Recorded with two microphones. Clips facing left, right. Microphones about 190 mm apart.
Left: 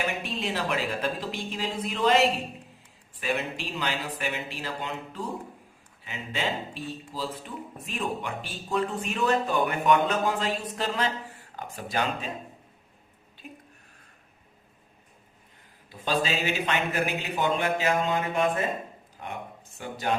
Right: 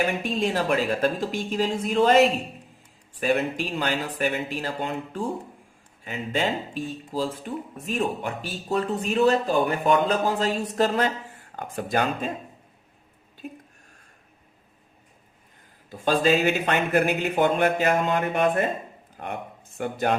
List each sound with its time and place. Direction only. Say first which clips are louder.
0.0 s speech: right 6 dB; 45° right (ahead or behind)
15.9 s speech: right 7 dB; 45° right (ahead or behind)